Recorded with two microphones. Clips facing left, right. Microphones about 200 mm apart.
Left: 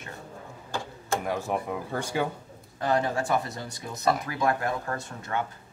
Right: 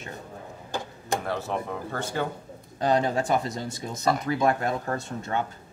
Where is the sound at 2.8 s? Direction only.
20° right (ahead or behind).